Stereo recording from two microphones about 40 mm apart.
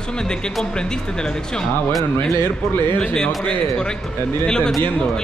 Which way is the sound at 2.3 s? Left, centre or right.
Left.